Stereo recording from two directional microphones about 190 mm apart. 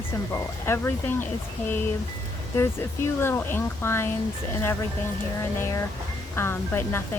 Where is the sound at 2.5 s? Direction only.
15° left (ahead or behind).